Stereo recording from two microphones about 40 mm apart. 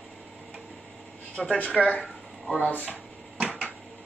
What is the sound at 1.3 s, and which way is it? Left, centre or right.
Speech, left.